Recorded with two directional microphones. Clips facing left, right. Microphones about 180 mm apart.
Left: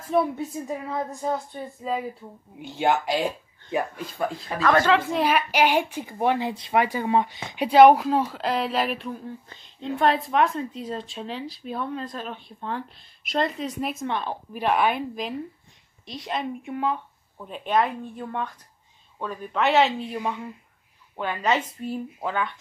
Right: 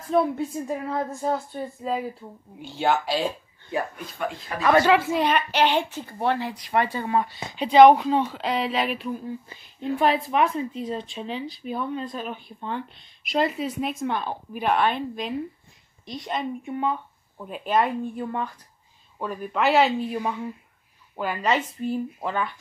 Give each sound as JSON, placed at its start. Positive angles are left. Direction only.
{"t": 0.1, "sound": "speech", "side_deg": 5}
{"t": 2.6, "sound": "speech", "side_deg": 20}
{"t": 4.6, "sound": "a woman's voice", "side_deg": -10}
{"t": 5.2, "sound": "a woman's voice", "side_deg": 10}